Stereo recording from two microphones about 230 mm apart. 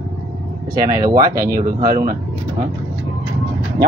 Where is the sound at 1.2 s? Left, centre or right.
Right.